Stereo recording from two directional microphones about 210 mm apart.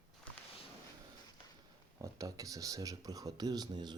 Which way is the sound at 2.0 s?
15° right (ahead or behind).